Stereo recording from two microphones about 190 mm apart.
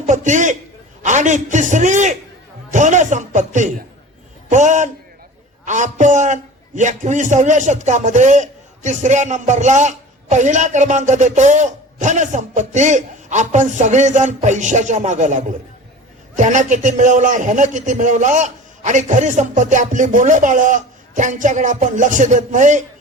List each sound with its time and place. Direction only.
0.0 s a man's voice: 40° right (ahead or behind)